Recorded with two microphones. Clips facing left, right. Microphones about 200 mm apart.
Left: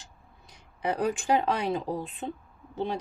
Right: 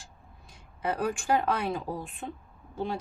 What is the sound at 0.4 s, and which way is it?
A woman's voice, 20° left (ahead or behind).